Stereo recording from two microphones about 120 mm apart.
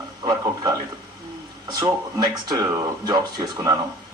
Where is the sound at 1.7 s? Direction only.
35° right (ahead or behind).